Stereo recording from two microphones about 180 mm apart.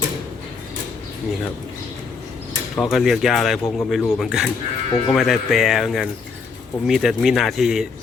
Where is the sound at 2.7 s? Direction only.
5° left (ahead or behind).